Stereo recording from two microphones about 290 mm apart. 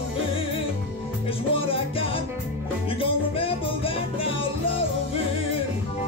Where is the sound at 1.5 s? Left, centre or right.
Centre.